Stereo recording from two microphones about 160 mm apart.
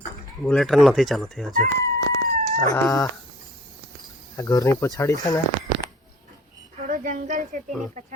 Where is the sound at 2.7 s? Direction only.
20° left (ahead or behind).